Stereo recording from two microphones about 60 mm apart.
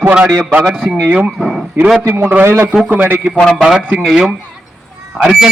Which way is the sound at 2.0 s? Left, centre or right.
Right.